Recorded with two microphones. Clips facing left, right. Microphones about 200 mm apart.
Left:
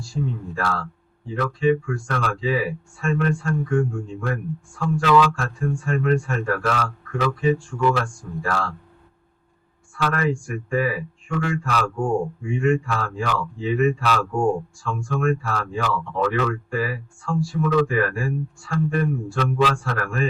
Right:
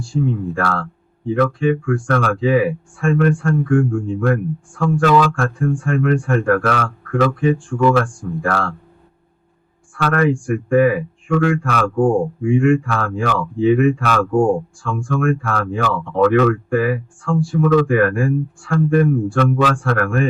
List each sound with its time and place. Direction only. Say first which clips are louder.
0.0 s speech: right 8 dB; 55° right (ahead or behind)
9.9 s speech: right 6 dB; 55° right (ahead or behind)